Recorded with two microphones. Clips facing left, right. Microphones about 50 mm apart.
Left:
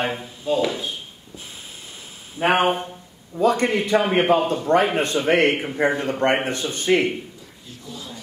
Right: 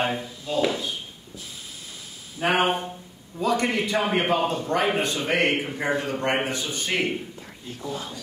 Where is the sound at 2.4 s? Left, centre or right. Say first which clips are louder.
Left 3 dB; left.